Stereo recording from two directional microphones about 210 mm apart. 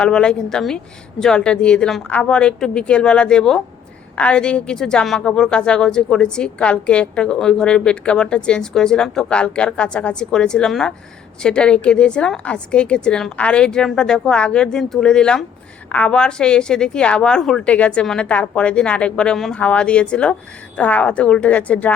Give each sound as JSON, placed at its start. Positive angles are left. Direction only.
{"t": 0.0, "sound": "a woman's voice", "side_deg": 5}